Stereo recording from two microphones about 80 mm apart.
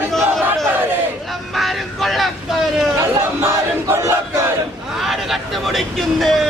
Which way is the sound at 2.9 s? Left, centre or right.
Right.